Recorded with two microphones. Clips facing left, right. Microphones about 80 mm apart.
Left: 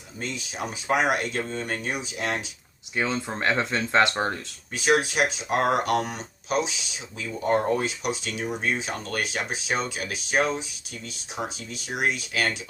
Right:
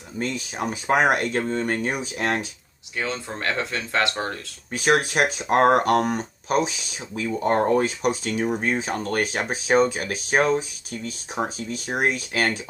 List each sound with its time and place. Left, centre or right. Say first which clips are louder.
0.2 s speech: right 5 dB; right
2.9 s speech: left 1 dB; left
4.7 s speech: right 2 dB; right